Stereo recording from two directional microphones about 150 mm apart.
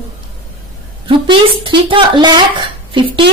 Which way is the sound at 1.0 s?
35° right (ahead or behind).